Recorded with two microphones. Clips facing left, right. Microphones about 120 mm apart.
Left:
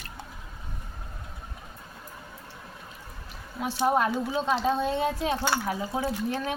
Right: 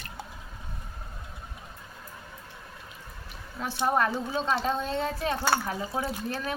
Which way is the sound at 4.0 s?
15° left (ahead or behind).